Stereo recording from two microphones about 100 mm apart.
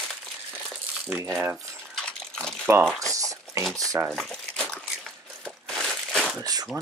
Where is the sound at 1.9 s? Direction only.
10° left (ahead or behind).